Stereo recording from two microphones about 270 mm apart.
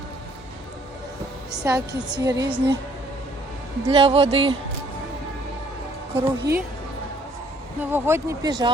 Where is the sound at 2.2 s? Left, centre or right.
Centre.